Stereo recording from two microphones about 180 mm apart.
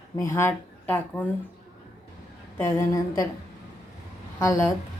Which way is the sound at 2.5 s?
15° left (ahead or behind).